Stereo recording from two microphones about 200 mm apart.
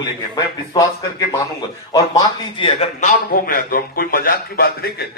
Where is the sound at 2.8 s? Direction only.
40° left (ahead or behind).